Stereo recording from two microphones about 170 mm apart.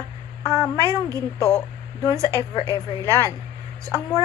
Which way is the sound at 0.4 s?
25° left (ahead or behind).